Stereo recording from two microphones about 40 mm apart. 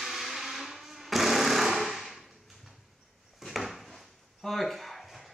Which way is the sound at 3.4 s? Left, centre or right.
Centre.